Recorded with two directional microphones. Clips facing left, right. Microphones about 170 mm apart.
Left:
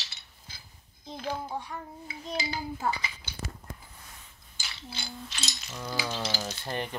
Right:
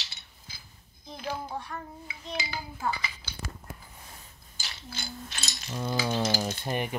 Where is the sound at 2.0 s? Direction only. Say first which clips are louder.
Left 6 dB; 35° left (ahead or behind).